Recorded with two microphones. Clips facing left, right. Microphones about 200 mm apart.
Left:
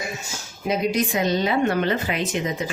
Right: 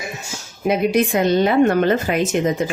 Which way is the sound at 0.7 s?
60° right (ahead or behind).